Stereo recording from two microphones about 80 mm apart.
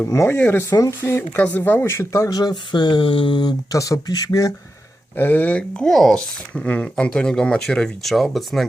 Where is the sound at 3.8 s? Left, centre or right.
Left.